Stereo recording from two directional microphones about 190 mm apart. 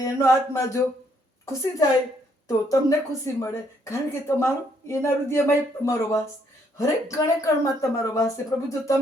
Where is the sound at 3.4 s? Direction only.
15° left (ahead or behind).